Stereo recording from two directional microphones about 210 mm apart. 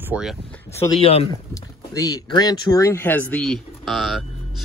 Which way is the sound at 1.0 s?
30° left (ahead or behind).